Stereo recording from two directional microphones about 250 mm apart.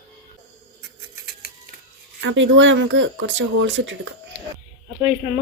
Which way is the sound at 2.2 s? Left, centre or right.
Right.